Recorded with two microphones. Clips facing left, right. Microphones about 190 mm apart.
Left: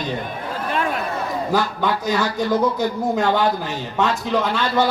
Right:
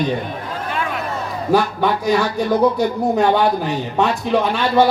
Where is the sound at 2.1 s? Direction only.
15° right (ahead or behind).